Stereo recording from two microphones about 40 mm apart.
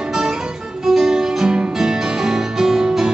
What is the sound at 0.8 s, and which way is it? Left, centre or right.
Music, centre.